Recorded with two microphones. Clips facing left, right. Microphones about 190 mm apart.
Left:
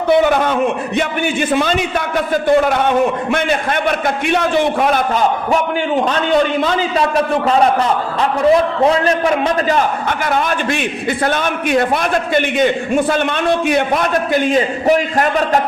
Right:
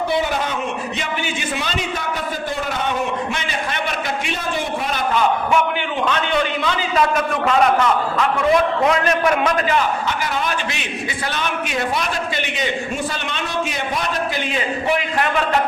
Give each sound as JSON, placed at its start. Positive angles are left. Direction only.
{"t": 0.1, "sound": "a man's voice", "side_deg": 60}
{"t": 4.4, "sound": "a man's voice", "side_deg": 70}
{"t": 6.1, "sound": "a man's voice", "side_deg": 40}
{"t": 10.1, "sound": "a man's voice", "side_deg": 55}